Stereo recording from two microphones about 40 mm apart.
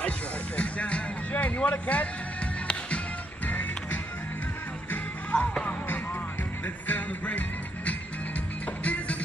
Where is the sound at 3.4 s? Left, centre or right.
Left.